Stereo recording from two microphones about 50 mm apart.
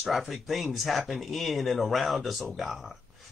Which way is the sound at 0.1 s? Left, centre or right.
Centre.